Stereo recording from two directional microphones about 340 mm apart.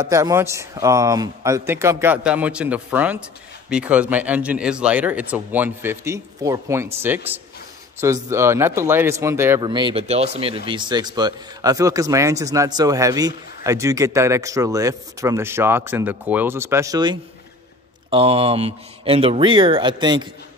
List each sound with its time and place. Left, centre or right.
0.0 s speech: centre